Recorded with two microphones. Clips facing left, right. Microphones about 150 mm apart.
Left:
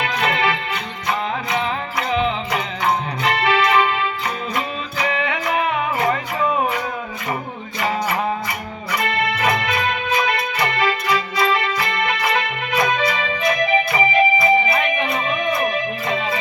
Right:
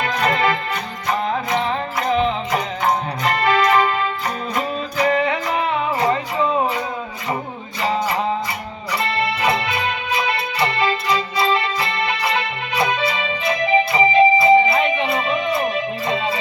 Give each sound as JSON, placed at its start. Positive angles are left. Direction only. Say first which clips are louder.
{"t": 0.0, "sound": "music", "louder": "right 1 dB", "side_deg": -40}
{"t": 7.8, "sound": "music", "louder": "right 1 dB", "side_deg": -30}